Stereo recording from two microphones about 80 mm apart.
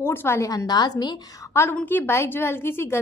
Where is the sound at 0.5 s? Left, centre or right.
Left.